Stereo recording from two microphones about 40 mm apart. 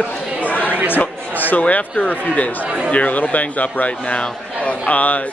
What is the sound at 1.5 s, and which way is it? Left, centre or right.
Speech, left.